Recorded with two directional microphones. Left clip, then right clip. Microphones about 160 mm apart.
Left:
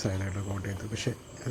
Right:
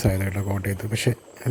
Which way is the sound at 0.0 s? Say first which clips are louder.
Right 8 dB; 35° right (ahead or behind).